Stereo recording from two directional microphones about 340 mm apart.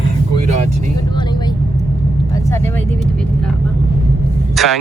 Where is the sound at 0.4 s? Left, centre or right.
Centre.